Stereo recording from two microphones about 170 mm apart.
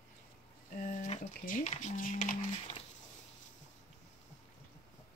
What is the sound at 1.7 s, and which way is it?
Speech, 45° left (ahead or behind).